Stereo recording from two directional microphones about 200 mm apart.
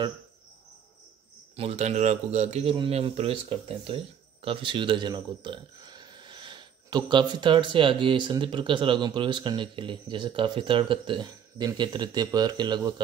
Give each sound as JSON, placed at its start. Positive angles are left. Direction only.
{"t": 1.6, "sound": "speech", "side_deg": -30}